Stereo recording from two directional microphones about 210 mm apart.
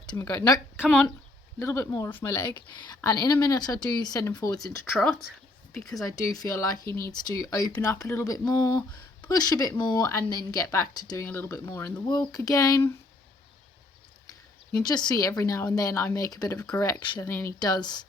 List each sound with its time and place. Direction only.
0.0 s a woman's voice: 15° left (ahead or behind)
0.8 s speech: centre (ahead or behind)
1.5 s a woman's voice: 15° left (ahead or behind)
4.9 s speech: centre (ahead or behind)
6.1 s a woman's voice: 15° left (ahead or behind)
14.8 s a woman's voice: 20° left (ahead or behind)